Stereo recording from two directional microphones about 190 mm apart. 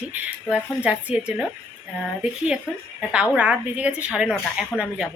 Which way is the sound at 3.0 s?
5° right (ahead or behind).